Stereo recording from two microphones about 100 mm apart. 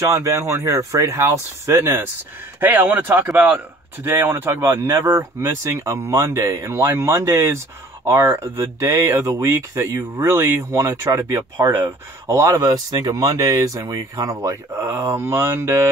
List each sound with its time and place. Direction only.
0.2 s speech: 30° right (ahead or behind)